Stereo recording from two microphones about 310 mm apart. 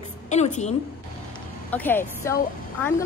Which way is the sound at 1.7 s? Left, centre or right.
Centre.